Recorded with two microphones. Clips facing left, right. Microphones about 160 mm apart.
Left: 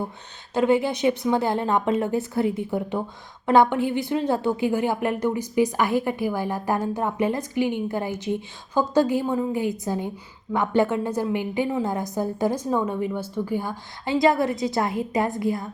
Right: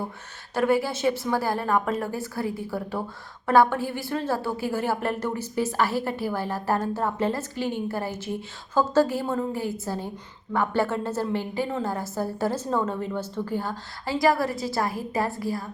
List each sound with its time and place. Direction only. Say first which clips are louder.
0.5 s a woman's voice: left 3 dB; 20° left (ahead or behind)